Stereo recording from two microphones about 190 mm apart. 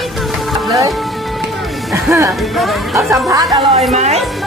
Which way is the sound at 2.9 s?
15° right (ahead or behind).